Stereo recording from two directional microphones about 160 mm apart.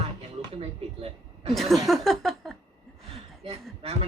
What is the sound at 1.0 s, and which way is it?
Speech, 40° right (ahead or behind).